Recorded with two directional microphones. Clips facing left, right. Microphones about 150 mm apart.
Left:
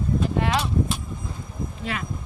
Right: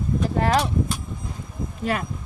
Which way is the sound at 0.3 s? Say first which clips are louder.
Right 6 dB; 40° right (ahead or behind).